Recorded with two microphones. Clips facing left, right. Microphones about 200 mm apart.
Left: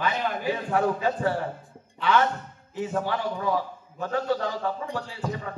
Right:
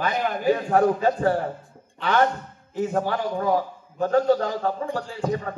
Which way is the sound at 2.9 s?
45° right (ahead or behind).